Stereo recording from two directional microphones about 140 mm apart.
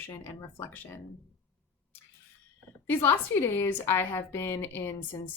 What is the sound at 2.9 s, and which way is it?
A woman's voice, 15° left (ahead or behind).